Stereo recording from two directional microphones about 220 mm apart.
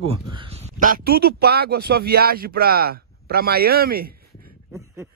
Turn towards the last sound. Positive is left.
turn(degrees=-45)  # may be behind; listen again after turning